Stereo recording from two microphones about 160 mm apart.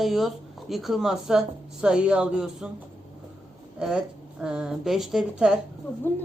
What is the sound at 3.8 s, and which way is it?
Speech, 5° right (ahead or behind).